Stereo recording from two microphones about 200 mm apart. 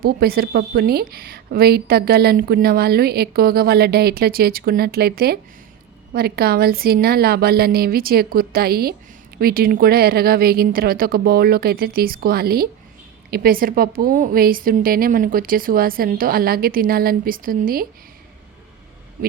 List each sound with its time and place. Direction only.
0.0 s a woman's voice: 50° right (ahead or behind)